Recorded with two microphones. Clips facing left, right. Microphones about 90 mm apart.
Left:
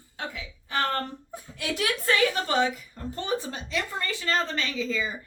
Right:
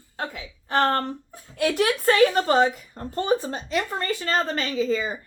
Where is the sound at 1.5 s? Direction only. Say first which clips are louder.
Right 7 dB; 45° right (ahead or behind).